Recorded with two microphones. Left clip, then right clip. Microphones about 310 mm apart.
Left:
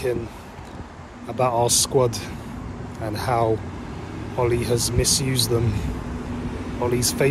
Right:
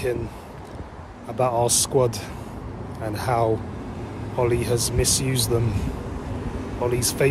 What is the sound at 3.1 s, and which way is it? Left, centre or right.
Speech, centre.